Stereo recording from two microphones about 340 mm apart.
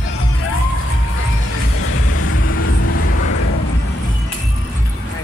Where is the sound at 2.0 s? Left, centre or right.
Left.